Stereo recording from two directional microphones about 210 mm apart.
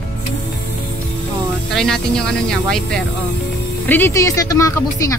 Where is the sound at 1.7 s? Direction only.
5° left (ahead or behind).